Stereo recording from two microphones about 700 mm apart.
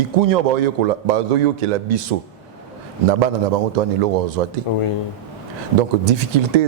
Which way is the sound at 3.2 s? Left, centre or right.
Right.